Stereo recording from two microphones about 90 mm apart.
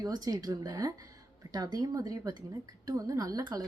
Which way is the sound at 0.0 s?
45° right (ahead or behind).